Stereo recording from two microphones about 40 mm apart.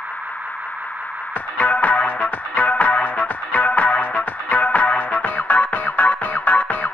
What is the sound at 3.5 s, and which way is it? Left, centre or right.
Music, left.